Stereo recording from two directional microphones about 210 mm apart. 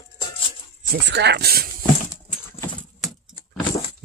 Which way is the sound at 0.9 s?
55° right (ahead or behind).